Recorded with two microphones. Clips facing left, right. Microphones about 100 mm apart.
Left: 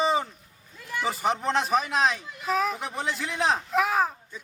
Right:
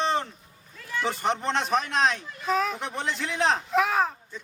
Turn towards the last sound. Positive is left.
turn(degrees=0)  # may be behind; listen again after turning